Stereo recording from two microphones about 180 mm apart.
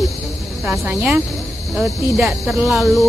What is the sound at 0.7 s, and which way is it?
Speech, 10° right (ahead or behind).